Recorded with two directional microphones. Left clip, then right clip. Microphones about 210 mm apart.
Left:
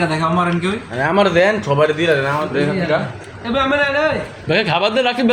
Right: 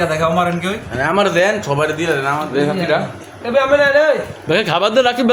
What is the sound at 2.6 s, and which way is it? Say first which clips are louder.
A man's voice: right 3 dB; 25° right (ahead or behind).